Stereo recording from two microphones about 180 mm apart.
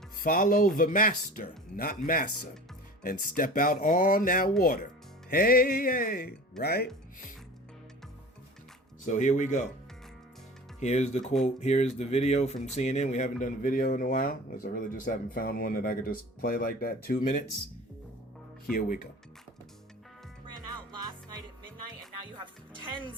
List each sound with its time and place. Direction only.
0.2 s speech: 50° left (ahead or behind)
3.0 s speech: 50° left (ahead or behind)
6.6 s speech: 60° left (ahead or behind)
9.0 s speech: 45° left (ahead or behind)
10.8 s speech: 40° left (ahead or behind)
18.7 s speech: 50° left (ahead or behind)
22.4 s music: 25° right (ahead or behind)